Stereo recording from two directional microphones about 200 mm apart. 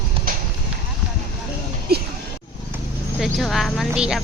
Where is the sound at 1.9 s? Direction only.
50° right (ahead or behind).